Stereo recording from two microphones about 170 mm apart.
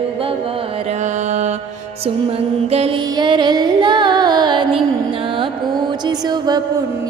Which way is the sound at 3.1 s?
25° right (ahead or behind).